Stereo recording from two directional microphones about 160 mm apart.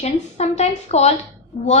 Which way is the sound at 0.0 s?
45° left (ahead or behind).